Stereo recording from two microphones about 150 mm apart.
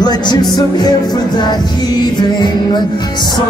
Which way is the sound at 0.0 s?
30° left (ahead or behind).